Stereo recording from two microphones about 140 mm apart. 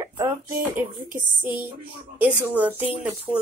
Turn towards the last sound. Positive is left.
turn(degrees=-10)  # may be behind; listen again after turning